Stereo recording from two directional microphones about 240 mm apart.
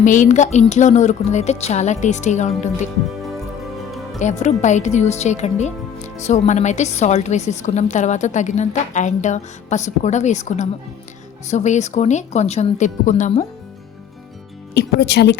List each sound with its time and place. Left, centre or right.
0.0 s a woman's voice: left
4.2 s a woman's voice: left
14.7 s speech: left